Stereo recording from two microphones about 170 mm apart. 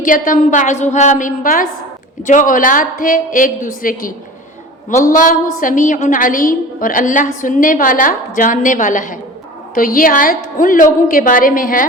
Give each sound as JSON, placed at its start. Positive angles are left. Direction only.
{"t": 0.0, "sound": "a woman's voice", "side_deg": 50}